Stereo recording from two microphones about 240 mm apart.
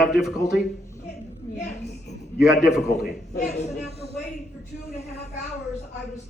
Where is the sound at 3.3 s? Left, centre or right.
Left.